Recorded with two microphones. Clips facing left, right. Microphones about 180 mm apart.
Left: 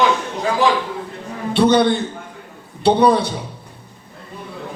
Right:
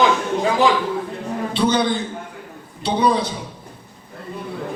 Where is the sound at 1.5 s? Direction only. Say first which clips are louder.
Left 6 dB; 65° left (ahead or behind).